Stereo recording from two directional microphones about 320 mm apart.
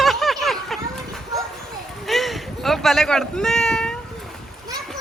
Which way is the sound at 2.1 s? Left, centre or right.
Centre.